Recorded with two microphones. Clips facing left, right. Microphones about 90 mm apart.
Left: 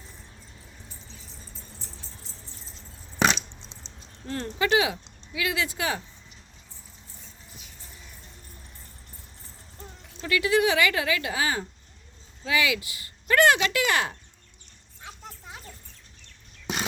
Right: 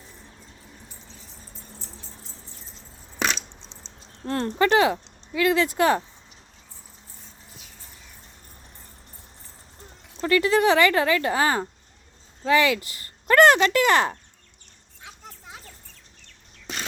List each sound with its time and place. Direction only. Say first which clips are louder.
2.6 s a sound: even; centre (ahead or behind)
4.3 s speech: right 4 dB; 55° right (ahead or behind)
10.2 s speech: right 3 dB; 45° right (ahead or behind)